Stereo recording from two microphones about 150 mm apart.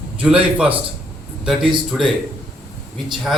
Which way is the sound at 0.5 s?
10° right (ahead or behind).